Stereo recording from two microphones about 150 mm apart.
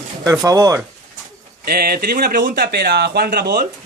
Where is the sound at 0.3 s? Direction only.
25° right (ahead or behind).